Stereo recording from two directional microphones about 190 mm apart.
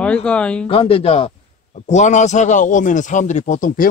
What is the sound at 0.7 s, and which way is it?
A man's voice, 30° left (ahead or behind).